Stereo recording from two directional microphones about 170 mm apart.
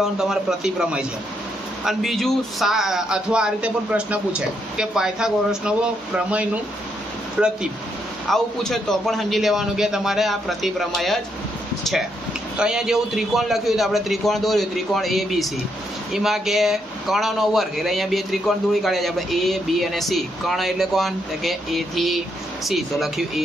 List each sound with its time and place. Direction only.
0.0 s speech: 5° right (ahead or behind)
12.5 s speech: 5° right (ahead or behind)